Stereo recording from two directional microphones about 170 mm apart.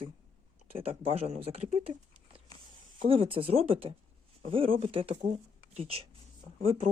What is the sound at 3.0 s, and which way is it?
Speech, 30° right (ahead or behind).